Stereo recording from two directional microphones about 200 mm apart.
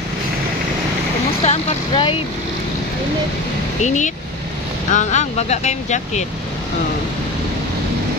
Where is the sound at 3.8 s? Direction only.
35° left (ahead or behind).